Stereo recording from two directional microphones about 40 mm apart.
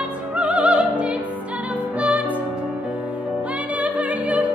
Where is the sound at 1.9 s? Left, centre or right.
Right.